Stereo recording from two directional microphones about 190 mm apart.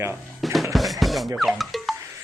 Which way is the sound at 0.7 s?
Centre (ahead or behind).